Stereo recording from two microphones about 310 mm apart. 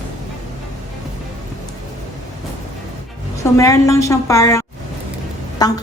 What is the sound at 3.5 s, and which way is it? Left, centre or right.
A woman's voice, centre.